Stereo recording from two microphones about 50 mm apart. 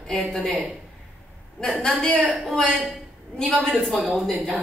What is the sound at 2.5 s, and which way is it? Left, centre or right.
Speech, centre.